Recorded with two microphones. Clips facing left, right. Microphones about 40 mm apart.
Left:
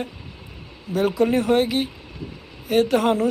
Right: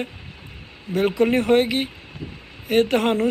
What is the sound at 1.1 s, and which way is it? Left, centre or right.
Speech, right.